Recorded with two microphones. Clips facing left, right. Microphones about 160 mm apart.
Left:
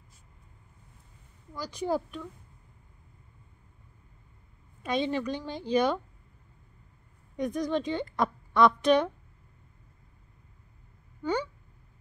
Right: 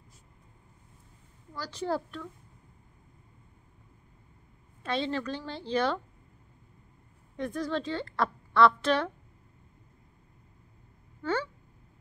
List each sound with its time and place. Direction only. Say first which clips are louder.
1.5 s a woman's voice: left 2 dB; 15° left (ahead or behind)
4.8 s a woman's voice: left 2 dB; 15° left (ahead or behind)
7.3 s a woman's voice: left 3 dB; 15° left (ahead or behind)